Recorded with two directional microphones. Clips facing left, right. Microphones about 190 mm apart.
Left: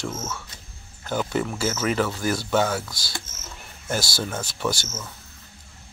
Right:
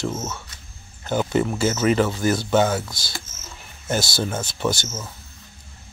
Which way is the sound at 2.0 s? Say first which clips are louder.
Right 4 dB; 20° right (ahead or behind).